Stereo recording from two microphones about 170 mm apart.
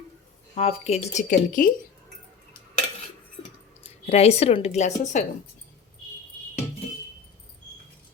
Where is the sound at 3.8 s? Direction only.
35° left (ahead or behind).